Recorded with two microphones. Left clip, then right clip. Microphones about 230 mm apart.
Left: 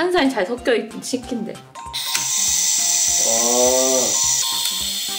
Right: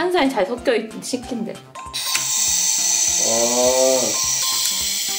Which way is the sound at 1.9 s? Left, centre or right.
Centre.